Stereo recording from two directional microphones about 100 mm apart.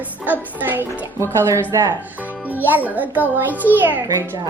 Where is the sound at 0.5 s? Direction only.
20° right (ahead or behind).